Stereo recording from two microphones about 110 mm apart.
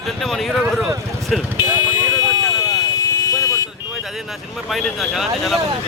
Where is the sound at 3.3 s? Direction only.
35° left (ahead or behind).